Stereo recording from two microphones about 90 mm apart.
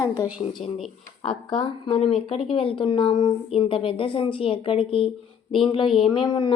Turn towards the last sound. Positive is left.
turn(degrees=55)  # may be behind; listen again after turning